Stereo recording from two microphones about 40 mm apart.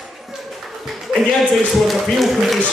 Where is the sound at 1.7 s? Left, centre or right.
Centre.